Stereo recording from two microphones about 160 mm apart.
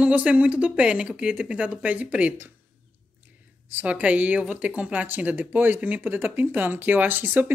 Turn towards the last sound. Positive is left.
turn(degrees=-10)  # may be behind; listen again after turning